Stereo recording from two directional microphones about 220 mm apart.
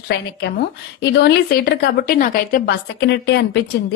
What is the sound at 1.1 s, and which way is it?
A woman's voice, 45° left (ahead or behind).